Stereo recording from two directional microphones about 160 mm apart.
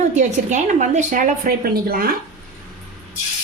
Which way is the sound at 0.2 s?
50° right (ahead or behind).